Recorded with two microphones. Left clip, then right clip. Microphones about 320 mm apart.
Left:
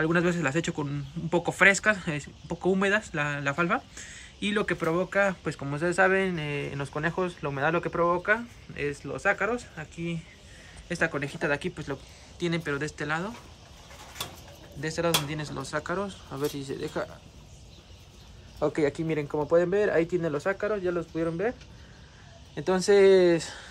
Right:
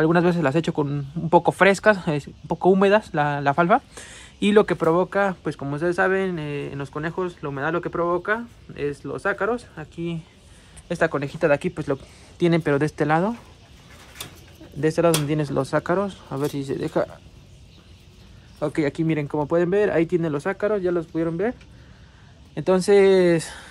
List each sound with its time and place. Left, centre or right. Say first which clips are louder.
0.0 s a man's voice: right 6 dB; centre
14.8 s speech: right 8 dB; centre
18.7 s speech: right 4 dB; right
22.6 s speech: right 4 dB; centre